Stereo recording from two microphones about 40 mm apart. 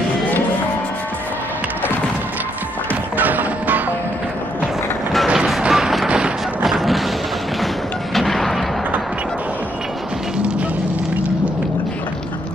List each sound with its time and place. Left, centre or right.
2.9 s music: right
5.7 s music: centre
6.0 s music: right
6.6 s a sound: centre
7.6 s music: centre